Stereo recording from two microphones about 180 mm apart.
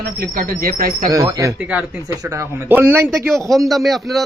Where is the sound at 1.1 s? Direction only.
20° right (ahead or behind).